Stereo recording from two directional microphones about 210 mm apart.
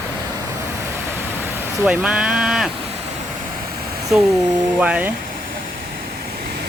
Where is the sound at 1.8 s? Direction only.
5° right (ahead or behind).